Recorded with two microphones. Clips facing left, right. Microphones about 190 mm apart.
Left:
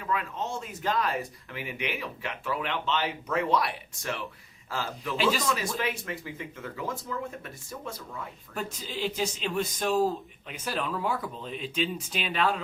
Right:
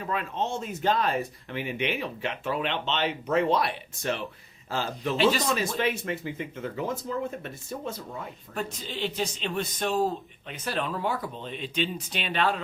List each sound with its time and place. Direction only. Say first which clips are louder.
0.0 s speech: right 2 dB; 30° right (ahead or behind)
8.5 s a man's voice: right 1 dB; 5° left (ahead or behind)